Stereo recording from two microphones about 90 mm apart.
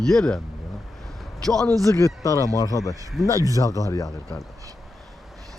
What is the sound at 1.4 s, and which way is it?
Speech, 5° left (ahead or behind).